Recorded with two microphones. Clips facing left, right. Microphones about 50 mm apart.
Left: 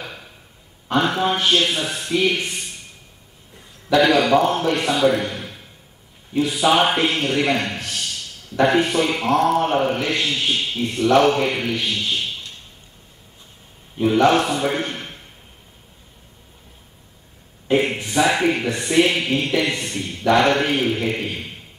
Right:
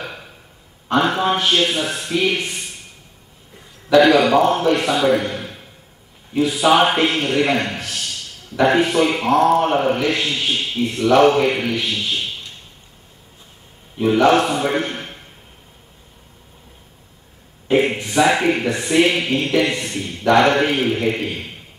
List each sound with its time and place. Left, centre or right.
0.0 s a sound: centre
0.9 s speech: centre
3.9 s a man's voice: centre
5.3 s a sound: centre
6.6 s speech: centre
7.7 s a sound: right
8.5 s a man's voice: centre
13.9 s a man's voice: centre
17.6 s a man's voice: centre